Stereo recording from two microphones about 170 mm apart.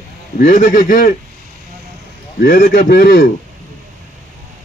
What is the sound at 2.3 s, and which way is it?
Speech, 55° left (ahead or behind).